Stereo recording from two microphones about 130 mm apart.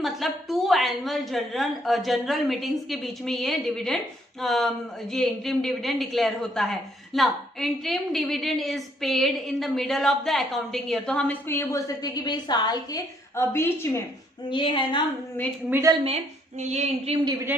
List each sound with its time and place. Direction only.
0.0 s a woman's voice: centre (ahead or behind); by 11.8 s 15° left (ahead or behind)
12.0 s a woman's voice: 30° left (ahead or behind)
13.4 s a woman's voice: 20° left (ahead or behind)
14.5 s a woman's voice: 40° left (ahead or behind)
15.7 s a woman's voice: 25° right (ahead or behind)
16.6 s a sound: 55° right (ahead or behind)